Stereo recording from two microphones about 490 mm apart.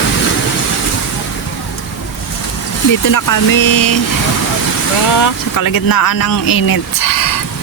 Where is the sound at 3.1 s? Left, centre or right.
Left.